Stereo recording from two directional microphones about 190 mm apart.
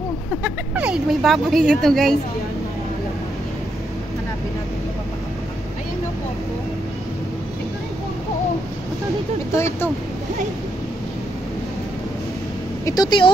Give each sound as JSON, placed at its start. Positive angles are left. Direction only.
{"t": 0.4, "sound": "speech", "side_deg": -5}
{"t": 9.5, "sound": "speech", "side_deg": 15}
{"t": 12.8, "sound": "speech", "side_deg": 20}